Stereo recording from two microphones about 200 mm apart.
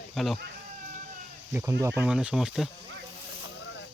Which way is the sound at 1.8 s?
5° right (ahead or behind).